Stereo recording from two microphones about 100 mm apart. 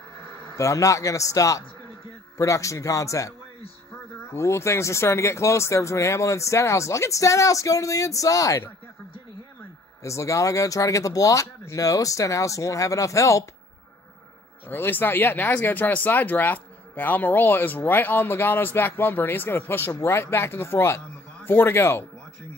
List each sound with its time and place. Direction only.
0.2 s a man's voice: 30° left (ahead or behind)
10.0 s speech: 30° left (ahead or behind)
14.7 s a man's voice: 20° left (ahead or behind)